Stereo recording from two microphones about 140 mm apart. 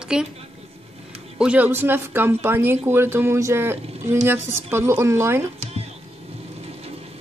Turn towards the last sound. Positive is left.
turn(degrees=-45)  # may be behind; listen again after turning